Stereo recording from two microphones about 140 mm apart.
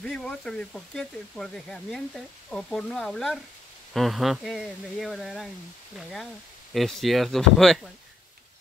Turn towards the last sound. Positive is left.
turn(degrees=0)  # may be behind; listen again after turning